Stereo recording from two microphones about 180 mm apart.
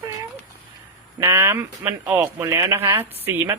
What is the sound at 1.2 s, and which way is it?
Speech, 15° right (ahead or behind).